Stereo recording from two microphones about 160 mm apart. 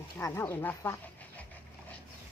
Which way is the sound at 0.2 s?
20° left (ahead or behind).